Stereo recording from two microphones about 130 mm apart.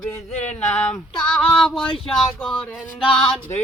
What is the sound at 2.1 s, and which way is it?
Speech, centre (ahead or behind).